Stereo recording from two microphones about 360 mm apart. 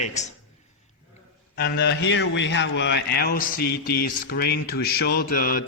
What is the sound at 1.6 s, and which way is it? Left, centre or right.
A man's voice, left.